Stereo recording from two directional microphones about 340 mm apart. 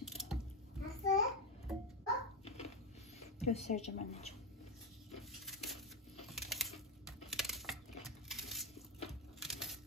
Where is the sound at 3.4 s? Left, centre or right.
Centre.